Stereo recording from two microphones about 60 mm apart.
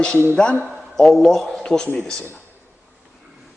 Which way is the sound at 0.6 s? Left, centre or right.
Centre.